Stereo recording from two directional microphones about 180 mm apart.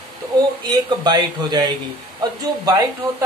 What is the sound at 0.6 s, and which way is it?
Speech, 25° right (ahead or behind).